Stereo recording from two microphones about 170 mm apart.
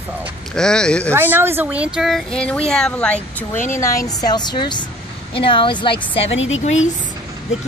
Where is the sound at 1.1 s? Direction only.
10° right (ahead or behind); by 5.9 s 30° left (ahead or behind).